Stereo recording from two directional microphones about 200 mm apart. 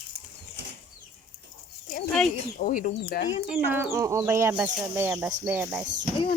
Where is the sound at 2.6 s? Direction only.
40° left (ahead or behind).